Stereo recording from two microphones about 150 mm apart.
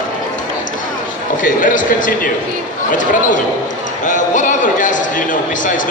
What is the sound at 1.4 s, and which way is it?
Speech, 60° left (ahead or behind).